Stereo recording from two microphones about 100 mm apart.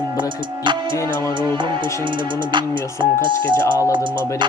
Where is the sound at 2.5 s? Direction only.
50° right (ahead or behind).